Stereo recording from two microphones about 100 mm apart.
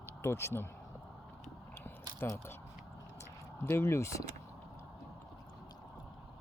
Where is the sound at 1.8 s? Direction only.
25° left (ahead or behind).